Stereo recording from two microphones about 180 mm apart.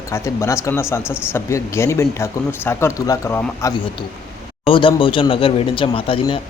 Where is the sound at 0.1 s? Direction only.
15° left (ahead or behind).